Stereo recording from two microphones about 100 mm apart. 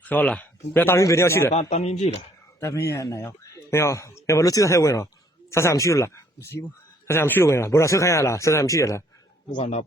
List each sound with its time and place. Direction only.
0.0 s speech: 15° left (ahead or behind)
0.7 s speech: 25° left (ahead or behind)
1.5 s speech: 90° left
2.6 s speech: 30° left (ahead or behind)